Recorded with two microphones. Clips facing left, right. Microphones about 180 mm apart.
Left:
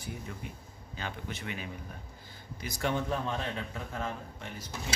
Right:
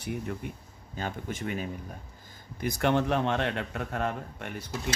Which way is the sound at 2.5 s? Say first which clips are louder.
Right 6 dB; 60° right (ahead or behind).